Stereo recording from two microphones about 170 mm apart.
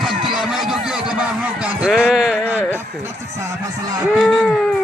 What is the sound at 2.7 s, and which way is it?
Speech, 15° right (ahead or behind).